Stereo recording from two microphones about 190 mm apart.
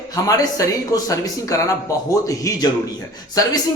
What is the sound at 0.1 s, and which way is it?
A man's voice, 20° left (ahead or behind).